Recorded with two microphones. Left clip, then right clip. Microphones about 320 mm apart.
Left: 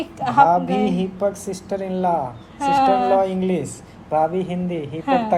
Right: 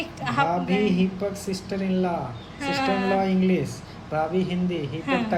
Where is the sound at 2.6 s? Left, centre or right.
Centre.